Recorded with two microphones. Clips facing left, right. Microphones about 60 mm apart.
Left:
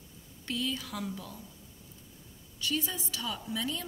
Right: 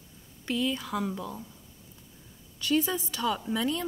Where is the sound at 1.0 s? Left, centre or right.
Right.